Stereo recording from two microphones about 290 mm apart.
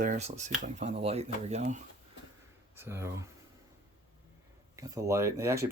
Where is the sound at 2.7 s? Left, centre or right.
Centre.